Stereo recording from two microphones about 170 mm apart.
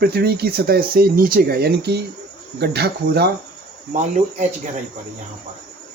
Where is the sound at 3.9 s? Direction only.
45° right (ahead or behind).